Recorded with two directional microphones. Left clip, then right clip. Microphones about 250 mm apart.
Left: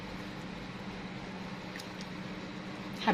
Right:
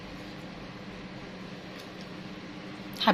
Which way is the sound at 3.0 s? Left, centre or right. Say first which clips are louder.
Right 6 dB; centre.